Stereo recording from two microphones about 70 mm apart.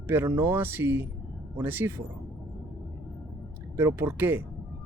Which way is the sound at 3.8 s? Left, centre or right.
Right.